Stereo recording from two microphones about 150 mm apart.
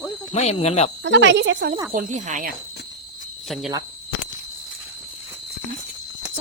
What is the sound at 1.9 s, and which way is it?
Speech, 55° right (ahead or behind).